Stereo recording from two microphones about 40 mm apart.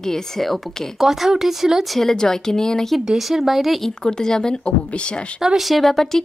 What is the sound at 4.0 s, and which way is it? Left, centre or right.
Speech, centre.